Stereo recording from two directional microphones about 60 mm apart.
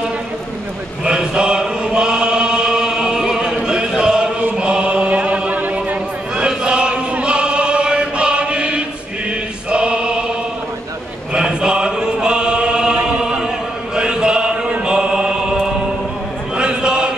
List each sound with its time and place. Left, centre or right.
1.0 s chant: centre
6.3 s chant: centre
9.7 s choir: centre
11.3 s chant: centre
16.5 s a sound: centre